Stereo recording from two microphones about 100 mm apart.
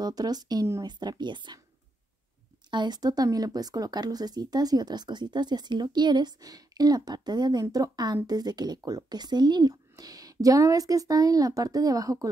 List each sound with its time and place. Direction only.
0.0 s speech: 40° right (ahead or behind)
2.7 s speech: 45° right (ahead or behind)